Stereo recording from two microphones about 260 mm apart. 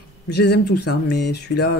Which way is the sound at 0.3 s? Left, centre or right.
Left.